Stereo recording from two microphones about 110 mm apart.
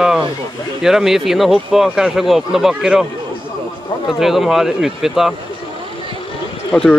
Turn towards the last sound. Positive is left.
turn(degrees=5)  # may be behind; listen again after turning